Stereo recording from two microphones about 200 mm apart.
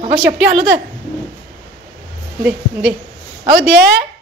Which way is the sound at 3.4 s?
50° right (ahead or behind).